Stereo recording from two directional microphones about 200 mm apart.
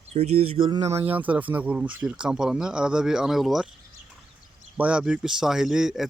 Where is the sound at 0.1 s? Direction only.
35° right (ahead or behind).